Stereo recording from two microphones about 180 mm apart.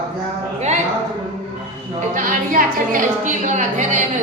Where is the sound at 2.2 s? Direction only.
45° right (ahead or behind).